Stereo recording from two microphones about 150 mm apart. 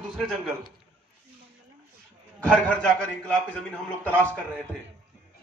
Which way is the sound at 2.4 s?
5° left (ahead or behind).